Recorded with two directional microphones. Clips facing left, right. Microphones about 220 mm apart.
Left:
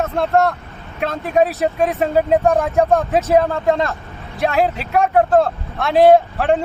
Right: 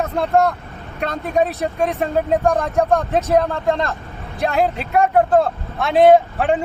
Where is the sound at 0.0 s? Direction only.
Centre (ahead or behind).